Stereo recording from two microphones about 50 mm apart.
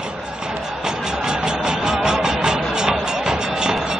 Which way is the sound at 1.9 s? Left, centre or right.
Centre.